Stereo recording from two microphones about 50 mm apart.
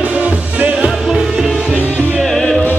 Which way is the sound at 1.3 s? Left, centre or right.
Centre.